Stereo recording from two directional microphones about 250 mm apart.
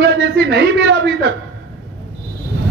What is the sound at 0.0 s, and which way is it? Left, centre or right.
A man's voice, right.